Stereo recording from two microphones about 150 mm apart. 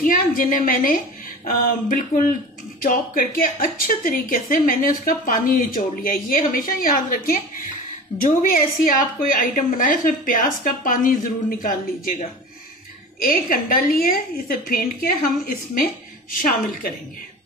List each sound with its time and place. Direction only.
0.0 s a woman's voice: 70° left (ahead or behind)